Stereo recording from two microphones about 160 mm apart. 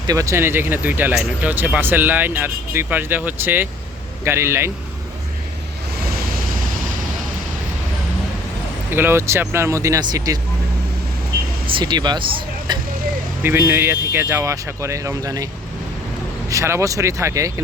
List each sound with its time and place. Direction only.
0.1 s speech: 20° right (ahead or behind)
6.1 s waves: 65° right (ahead or behind)
8.9 s speech: 15° right (ahead or behind)
11.6 s speech: 30° right (ahead or behind)
13.4 s speech: 15° right (ahead or behind)
16.5 s speech: 20° right (ahead or behind)